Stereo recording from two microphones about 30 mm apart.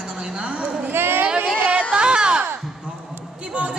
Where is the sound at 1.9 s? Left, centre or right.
Right.